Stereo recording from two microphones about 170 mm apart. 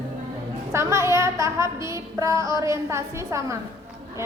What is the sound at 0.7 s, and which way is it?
A woman's voice, 15° right (ahead or behind).